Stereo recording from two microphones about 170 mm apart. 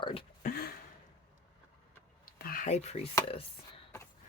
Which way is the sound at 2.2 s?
55° left (ahead or behind).